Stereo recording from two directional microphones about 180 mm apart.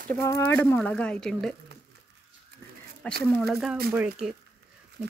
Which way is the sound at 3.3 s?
5° left (ahead or behind).